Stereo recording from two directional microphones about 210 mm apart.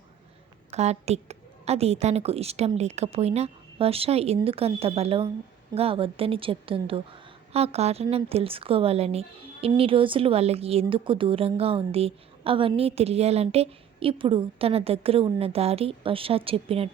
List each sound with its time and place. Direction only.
0.7 s a woman's voice: 30° right (ahead or behind)